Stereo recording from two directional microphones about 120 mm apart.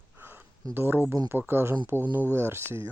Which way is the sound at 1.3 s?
20° right (ahead or behind).